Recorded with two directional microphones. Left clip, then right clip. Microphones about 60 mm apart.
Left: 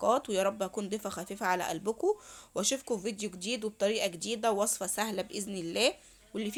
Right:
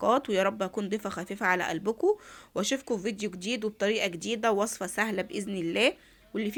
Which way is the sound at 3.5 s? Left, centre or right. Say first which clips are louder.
Right 2 dB; left.